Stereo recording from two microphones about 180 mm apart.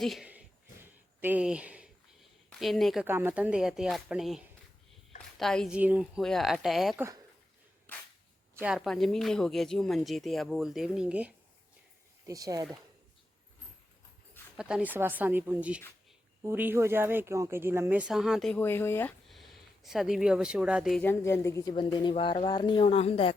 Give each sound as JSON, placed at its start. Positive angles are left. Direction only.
{"t": 0.0, "sound": "speech", "side_deg": 0}
{"t": 3.1, "sound": "speech", "side_deg": -10}
{"t": 8.6, "sound": "speech", "side_deg": 0}
{"t": 12.2, "sound": "speech", "side_deg": -20}
{"t": 14.5, "sound": "speech", "side_deg": -5}
{"t": 19.3, "sound": "speech", "side_deg": 0}
{"t": 21.0, "sound": "speech", "side_deg": 15}